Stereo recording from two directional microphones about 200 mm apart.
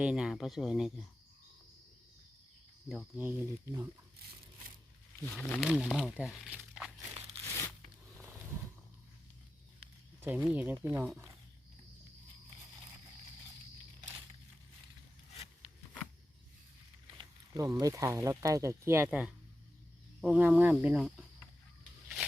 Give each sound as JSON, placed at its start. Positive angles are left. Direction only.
{"t": 0.0, "sound": "speech", "side_deg": -5}
{"t": 2.9, "sound": "speech", "side_deg": -5}
{"t": 5.2, "sound": "speech", "side_deg": 10}
{"t": 7.4, "sound": "tearing", "side_deg": 15}
{"t": 10.2, "sound": "speech", "side_deg": -5}
{"t": 17.1, "sound": "speech", "side_deg": -20}